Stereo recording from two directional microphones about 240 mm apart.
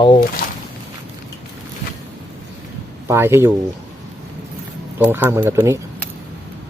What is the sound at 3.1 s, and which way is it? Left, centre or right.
Speech, centre.